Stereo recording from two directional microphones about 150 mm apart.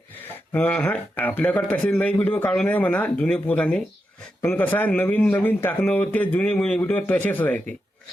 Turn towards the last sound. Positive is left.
turn(degrees=10)  # may be behind; listen again after turning